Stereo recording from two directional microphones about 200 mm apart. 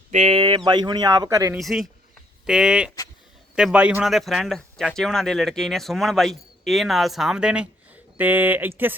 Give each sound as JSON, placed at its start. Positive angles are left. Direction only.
{"t": 0.1, "sound": "speech", "side_deg": -35}
{"t": 1.5, "sound": "speech", "side_deg": 0}